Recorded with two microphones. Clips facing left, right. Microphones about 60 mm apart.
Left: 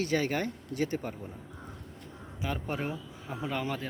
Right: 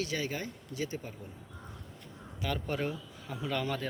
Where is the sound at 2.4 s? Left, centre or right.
Centre.